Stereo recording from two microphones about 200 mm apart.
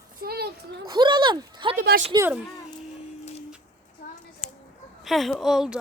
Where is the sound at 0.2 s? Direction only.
50° right (ahead or behind).